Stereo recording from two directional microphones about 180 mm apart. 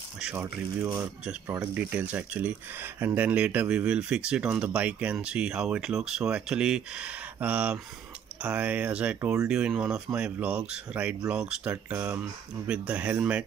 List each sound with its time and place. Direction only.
0.2 s speech: 5° right (ahead or behind)